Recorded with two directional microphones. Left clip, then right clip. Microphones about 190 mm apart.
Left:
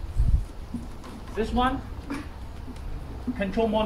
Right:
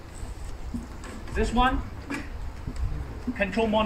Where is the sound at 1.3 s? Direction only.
15° right (ahead or behind).